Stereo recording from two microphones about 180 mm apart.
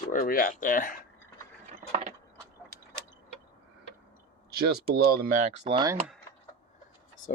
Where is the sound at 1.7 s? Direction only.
35° right (ahead or behind).